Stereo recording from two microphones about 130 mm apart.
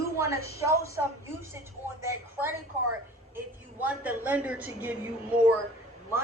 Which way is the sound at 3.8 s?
10° right (ahead or behind).